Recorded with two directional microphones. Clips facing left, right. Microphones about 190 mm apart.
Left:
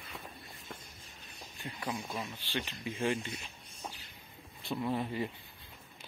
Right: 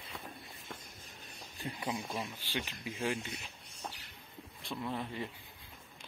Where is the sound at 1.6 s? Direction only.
25° right (ahead or behind).